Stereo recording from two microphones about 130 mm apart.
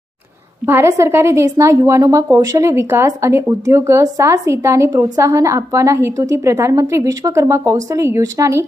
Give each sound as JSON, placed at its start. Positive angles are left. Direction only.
{"t": 0.7, "sound": "a woman's voice", "side_deg": -20}